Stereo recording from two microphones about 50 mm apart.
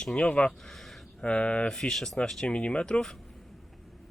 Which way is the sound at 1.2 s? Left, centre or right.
Left.